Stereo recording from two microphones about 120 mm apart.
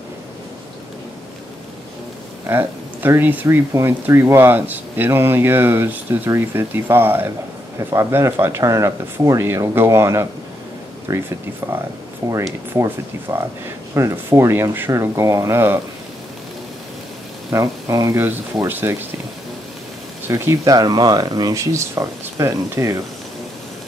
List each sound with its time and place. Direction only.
2.4 s speech: 15° right (ahead or behind)
17.5 s speech: 25° right (ahead or behind)
20.2 s speech: 20° right (ahead or behind)
20.7 s speech: 35° right (ahead or behind)